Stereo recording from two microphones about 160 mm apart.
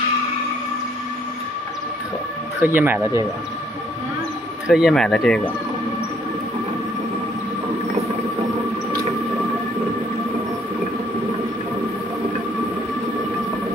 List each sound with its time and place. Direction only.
2.6 s speech: 10° right (ahead or behind)
4.6 s speech: 5° right (ahead or behind)